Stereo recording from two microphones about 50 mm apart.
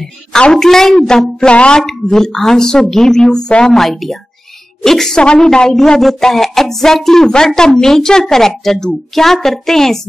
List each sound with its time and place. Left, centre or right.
0.4 s a woman's voice: centre
1.8 s speech: centre
3.7 s a woman's voice: centre